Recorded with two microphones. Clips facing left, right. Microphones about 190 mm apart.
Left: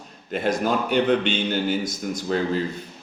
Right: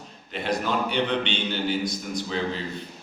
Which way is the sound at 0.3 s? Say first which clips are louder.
Left 4 dB; 45° left (ahead or behind).